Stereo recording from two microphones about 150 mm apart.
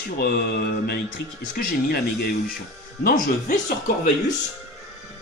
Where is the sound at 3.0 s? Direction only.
75° left (ahead or behind).